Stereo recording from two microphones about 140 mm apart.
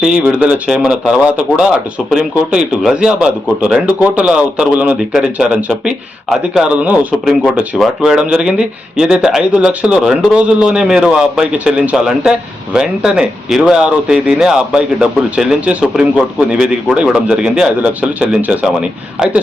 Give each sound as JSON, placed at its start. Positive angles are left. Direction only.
{"t": 0.0, "sound": "speech", "side_deg": -5}